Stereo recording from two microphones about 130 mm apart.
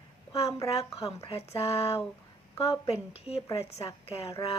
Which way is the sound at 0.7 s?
50° left (ahead or behind).